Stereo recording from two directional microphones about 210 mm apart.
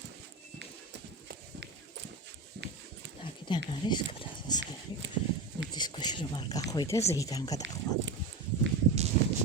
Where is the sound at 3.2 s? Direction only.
25° left (ahead or behind).